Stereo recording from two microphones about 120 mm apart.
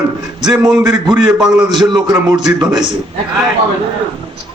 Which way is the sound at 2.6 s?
35° right (ahead or behind).